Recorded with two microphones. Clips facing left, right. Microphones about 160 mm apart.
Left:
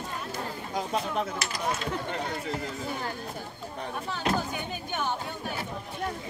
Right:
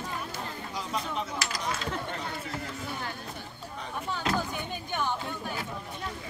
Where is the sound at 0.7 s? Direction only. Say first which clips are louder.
Left 5 dB; 50° left (ahead or behind).